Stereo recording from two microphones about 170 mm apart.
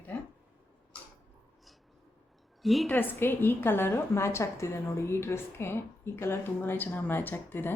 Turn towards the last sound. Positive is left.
turn(degrees=10)  # may be behind; listen again after turning